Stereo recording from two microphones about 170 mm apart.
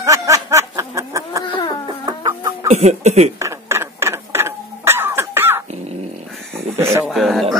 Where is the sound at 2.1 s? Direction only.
25° right (ahead or behind).